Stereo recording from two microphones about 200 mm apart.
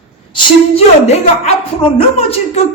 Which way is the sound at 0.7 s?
30° left (ahead or behind).